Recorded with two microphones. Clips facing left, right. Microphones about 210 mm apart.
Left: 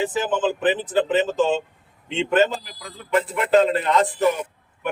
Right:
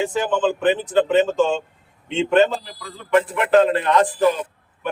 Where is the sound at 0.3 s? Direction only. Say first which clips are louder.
Right 3 dB; 5° left (ahead or behind).